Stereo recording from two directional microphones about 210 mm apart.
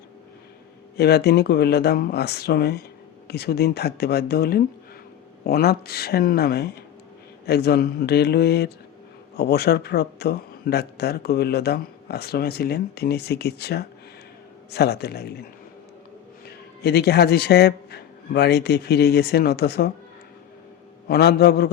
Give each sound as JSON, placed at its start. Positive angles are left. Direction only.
{"t": 0.9, "sound": "speech", "side_deg": 50}
{"t": 16.5, "sound": "a man's voice", "side_deg": 50}
{"t": 21.1, "sound": "speech", "side_deg": 50}